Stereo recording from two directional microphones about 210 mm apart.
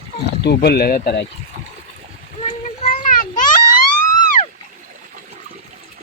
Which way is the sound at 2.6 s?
40° left (ahead or behind).